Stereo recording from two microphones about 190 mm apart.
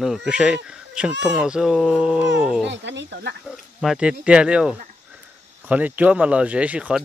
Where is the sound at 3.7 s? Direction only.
5° right (ahead or behind).